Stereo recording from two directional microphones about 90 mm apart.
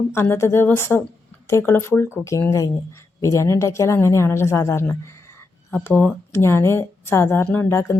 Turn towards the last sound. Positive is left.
turn(degrees=30)  # may be behind; listen again after turning